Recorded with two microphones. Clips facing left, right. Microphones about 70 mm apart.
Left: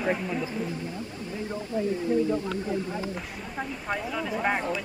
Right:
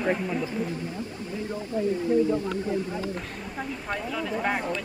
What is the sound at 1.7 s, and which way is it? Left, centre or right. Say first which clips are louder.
Speech: right 1 dB; left.